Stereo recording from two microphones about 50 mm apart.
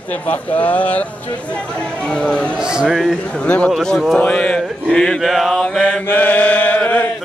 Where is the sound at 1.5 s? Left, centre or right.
Left.